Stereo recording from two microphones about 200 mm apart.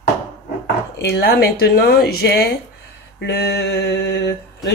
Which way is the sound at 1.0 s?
50° left (ahead or behind).